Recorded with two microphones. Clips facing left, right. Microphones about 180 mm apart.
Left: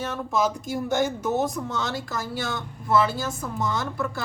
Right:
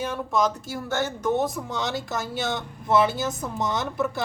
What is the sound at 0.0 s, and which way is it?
Speech, 10° right (ahead or behind).